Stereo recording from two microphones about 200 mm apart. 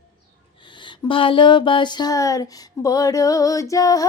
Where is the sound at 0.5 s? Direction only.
25° left (ahead or behind).